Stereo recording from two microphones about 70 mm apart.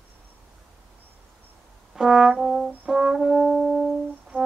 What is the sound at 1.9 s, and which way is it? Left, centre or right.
Brass instrument, centre.